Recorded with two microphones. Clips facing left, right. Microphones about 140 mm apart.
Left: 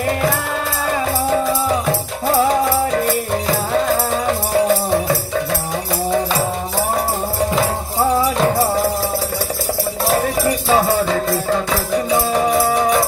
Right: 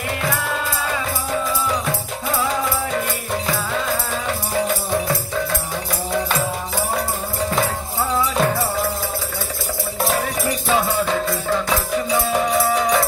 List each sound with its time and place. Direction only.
2.2 s music: 40° left (ahead or behind)
10.7 s music: 45° left (ahead or behind)
12.1 s music: 30° left (ahead or behind)